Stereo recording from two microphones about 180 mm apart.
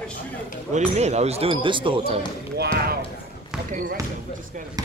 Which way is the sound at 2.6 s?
60° right (ahead or behind).